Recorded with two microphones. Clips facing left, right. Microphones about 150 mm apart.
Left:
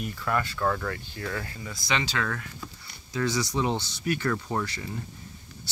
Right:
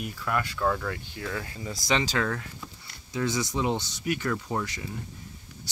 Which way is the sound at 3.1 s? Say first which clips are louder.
Left 1 dB; 20° right (ahead or behind).